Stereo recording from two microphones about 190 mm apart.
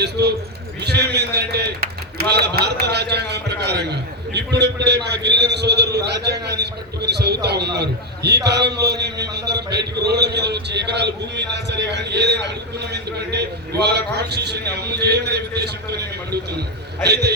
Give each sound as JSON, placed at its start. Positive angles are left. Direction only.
{"t": 0.0, "sound": "a man's voice", "side_deg": -60}